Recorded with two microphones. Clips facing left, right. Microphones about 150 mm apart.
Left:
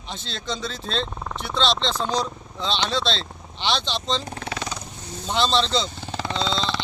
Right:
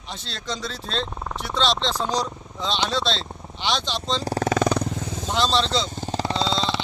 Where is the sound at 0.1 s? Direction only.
Centre (ahead or behind).